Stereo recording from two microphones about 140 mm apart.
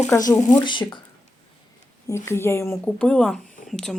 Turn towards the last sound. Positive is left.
turn(degrees=5)  # may be behind; listen again after turning